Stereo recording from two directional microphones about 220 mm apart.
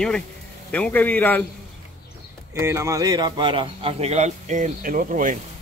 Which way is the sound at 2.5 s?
10° right (ahead or behind).